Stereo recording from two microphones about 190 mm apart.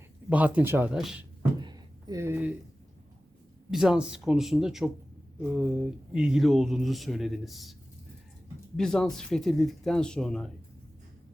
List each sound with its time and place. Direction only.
0.3 s speech: 5° right (ahead or behind)
1.4 s a sound: 20° right (ahead or behind)
3.7 s speech: 5° right (ahead or behind)